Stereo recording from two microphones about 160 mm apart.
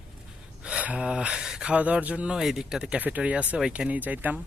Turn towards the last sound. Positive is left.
turn(degrees=-10)  # may be behind; listen again after turning